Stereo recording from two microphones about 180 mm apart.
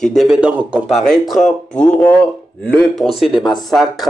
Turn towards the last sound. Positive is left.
turn(degrees=0)  # may be behind; listen again after turning